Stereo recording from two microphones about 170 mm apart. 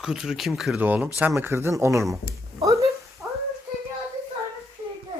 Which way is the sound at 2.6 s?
20° right (ahead or behind).